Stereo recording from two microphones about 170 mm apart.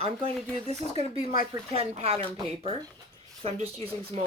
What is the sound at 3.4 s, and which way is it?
Speech, 35° right (ahead or behind).